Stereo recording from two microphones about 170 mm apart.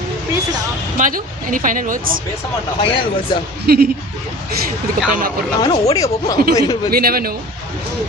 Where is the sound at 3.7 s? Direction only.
65° right (ahead or behind).